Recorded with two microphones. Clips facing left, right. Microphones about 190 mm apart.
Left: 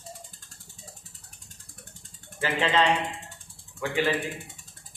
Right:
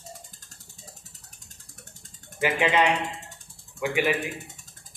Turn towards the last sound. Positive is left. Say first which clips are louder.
# right 2 dB
turn(degrees=-10)  # may be behind; listen again after turning